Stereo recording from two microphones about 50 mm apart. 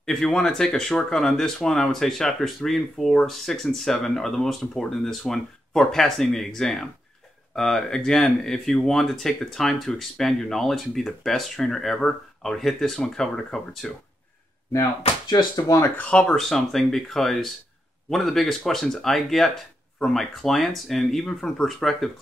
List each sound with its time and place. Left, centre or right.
0.0 s speech: centre
16.0 s speech: left
16.3 s speech: centre